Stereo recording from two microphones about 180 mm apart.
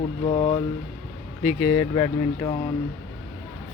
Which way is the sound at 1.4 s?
5° left (ahead or behind).